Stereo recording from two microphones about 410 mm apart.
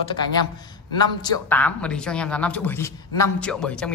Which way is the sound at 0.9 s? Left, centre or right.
Centre.